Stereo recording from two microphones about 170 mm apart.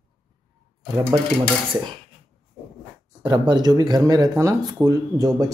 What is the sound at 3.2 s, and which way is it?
Speech, 25° right (ahead or behind).